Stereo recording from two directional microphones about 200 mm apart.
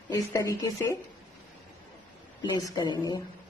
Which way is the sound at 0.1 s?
15° left (ahead or behind).